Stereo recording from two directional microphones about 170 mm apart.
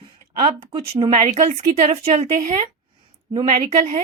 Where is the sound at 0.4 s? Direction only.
30° right (ahead or behind).